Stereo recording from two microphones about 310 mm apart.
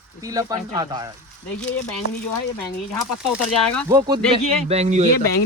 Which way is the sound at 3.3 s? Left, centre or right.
Centre.